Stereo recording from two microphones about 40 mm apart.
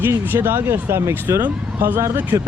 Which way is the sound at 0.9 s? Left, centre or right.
Right.